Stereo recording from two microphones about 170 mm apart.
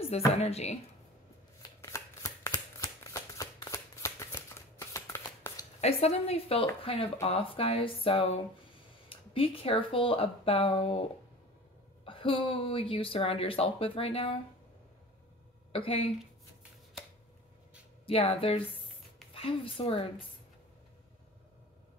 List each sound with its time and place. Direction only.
0.4 s speech: 40° left (ahead or behind)
1.8 s shuffling cards: 15° left (ahead or behind)
5.8 s speech: 35° left (ahead or behind)
15.7 s speech: 35° left (ahead or behind)
18.0 s speech: 35° left (ahead or behind)